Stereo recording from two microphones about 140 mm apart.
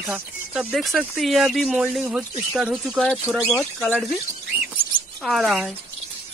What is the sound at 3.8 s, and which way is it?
Speech, 5° left (ahead or behind).